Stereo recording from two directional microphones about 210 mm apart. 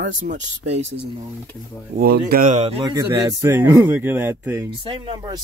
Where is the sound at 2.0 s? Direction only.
50° right (ahead or behind); by 2.8 s 30° right (ahead or behind).